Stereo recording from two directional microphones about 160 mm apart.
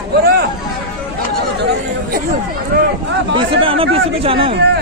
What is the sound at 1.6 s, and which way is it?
Chatter, 90° right.